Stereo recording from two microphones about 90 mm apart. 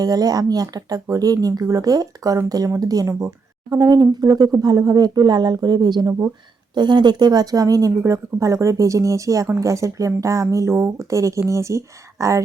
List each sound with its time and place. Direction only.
0.0 s a woman's voice: 45° right (ahead or behind)